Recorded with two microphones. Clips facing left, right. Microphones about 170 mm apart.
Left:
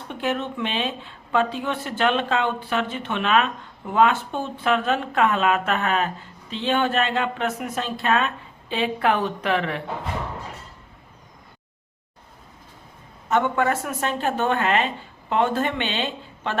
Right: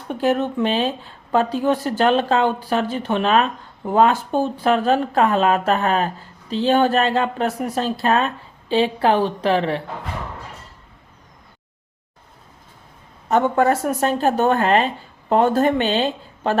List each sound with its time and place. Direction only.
0.1 s speech: 40° right (ahead or behind)
13.2 s speech: 35° right (ahead or behind)